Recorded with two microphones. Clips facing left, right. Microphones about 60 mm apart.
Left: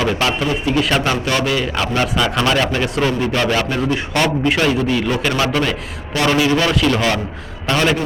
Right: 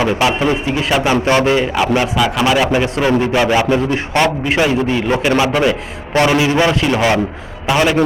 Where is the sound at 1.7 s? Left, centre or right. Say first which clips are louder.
Right 4 dB; centre.